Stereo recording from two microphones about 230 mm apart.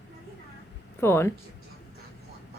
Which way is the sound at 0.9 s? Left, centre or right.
Centre.